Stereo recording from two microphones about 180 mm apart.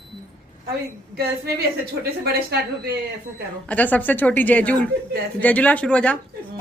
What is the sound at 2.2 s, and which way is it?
Speech, 60° right (ahead or behind).